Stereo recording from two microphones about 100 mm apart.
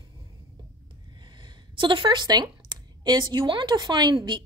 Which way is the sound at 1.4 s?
55° right (ahead or behind).